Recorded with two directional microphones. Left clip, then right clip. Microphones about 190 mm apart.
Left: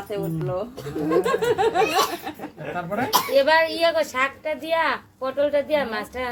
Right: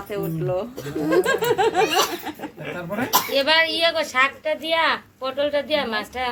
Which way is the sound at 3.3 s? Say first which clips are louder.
Left 1 dB; 50° left (ahead or behind).